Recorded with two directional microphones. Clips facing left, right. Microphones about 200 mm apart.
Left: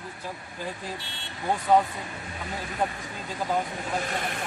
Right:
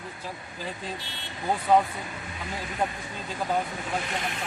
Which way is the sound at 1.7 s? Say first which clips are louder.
Even; centre (ahead or behind).